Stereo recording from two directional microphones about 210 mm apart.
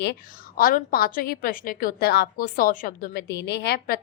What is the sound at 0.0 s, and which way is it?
A woman's voice, 50° left (ahead or behind).